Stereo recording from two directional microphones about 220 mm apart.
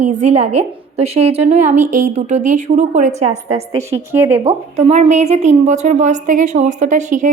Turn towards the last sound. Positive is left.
turn(degrees=-35)  # may be behind; listen again after turning